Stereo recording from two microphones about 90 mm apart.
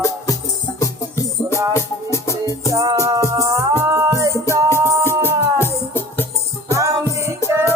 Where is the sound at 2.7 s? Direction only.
35° right (ahead or behind).